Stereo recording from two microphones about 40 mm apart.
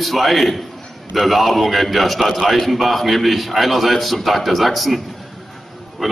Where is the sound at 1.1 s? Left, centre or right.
Centre.